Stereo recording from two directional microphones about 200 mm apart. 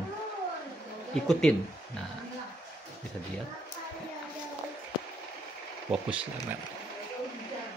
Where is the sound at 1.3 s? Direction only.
5° left (ahead or behind).